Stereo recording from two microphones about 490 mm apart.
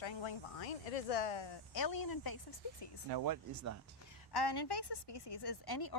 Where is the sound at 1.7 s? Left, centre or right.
Left.